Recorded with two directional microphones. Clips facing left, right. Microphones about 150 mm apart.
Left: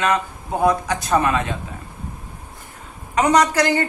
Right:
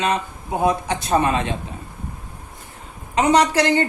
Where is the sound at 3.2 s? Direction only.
25° right (ahead or behind).